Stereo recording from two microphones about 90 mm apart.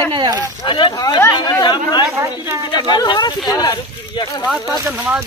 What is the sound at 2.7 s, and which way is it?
Speech, 50° left (ahead or behind).